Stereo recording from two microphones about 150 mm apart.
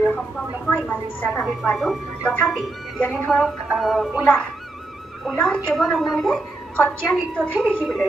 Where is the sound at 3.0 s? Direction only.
10° left (ahead or behind).